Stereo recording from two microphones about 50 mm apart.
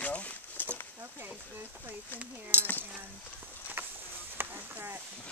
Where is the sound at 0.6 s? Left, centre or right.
Left.